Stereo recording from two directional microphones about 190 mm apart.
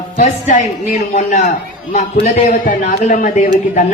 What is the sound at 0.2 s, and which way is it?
A man's voice, 40° left (ahead or behind).